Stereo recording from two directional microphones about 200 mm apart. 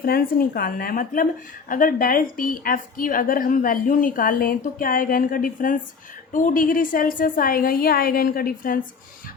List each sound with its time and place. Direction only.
0.0 s a woman's voice: 45° left (ahead or behind)